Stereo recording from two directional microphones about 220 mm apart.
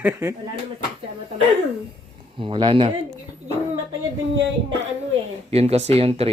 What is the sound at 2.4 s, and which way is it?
Speech, 20° right (ahead or behind).